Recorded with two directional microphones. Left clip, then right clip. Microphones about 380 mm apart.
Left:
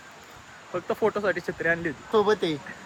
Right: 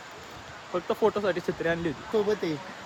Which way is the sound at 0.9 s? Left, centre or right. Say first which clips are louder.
Left 1 dB; centre.